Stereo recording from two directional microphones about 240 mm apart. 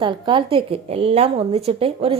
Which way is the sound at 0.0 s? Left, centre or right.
Centre.